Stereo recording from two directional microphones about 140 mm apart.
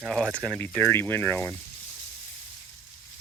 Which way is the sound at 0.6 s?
15° left (ahead or behind).